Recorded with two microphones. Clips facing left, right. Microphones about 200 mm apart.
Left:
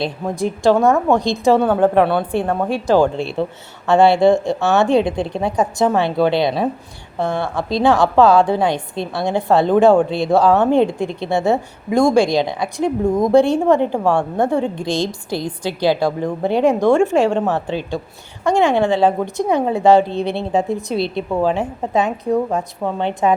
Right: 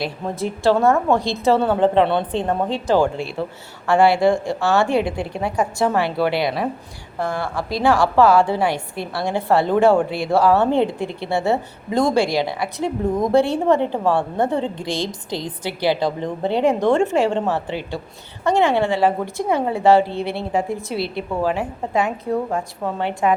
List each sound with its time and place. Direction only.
0.0 s a woman's voice: 15° left (ahead or behind)
3.0 s a woman's voice: 25° left (ahead or behind)